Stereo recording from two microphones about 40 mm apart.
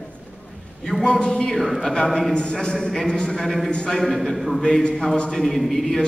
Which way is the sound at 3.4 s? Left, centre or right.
Centre.